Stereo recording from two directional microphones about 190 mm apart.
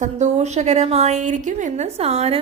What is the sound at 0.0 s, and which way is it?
A woman's voice, 35° right (ahead or behind).